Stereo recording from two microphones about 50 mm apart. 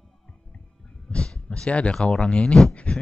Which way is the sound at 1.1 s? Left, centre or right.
Left.